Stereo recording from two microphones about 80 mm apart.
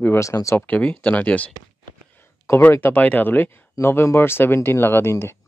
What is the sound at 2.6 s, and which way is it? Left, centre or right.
Speech, left.